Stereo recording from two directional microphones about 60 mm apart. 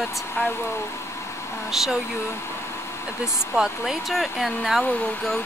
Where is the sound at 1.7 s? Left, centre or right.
Centre.